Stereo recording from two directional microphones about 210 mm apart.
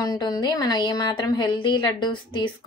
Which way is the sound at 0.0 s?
20° left (ahead or behind).